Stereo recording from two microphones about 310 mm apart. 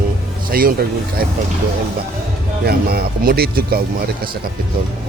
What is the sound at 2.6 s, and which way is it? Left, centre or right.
Speech, right.